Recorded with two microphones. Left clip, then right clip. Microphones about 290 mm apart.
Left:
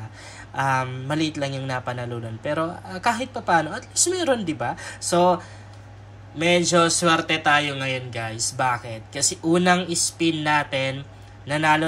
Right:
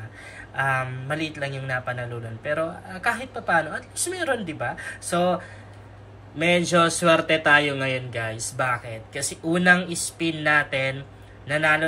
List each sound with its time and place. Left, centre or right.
0.6 s a man's voice: centre